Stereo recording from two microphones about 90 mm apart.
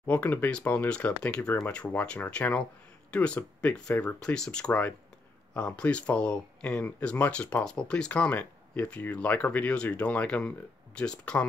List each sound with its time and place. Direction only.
0.0 s speech: 20° left (ahead or behind)